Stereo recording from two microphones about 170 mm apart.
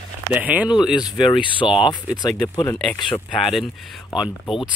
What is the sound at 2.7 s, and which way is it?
Speech, 5° left (ahead or behind).